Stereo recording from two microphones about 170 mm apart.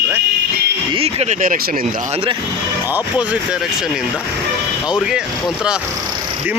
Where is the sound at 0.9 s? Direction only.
35° right (ahead or behind).